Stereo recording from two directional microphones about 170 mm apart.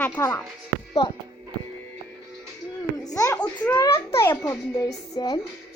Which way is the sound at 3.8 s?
15° left (ahead or behind).